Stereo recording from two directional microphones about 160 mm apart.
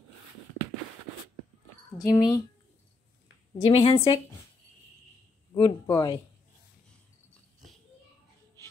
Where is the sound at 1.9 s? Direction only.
25° left (ahead or behind).